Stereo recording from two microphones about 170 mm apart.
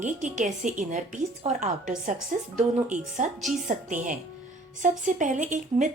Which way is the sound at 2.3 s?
50° right (ahead or behind).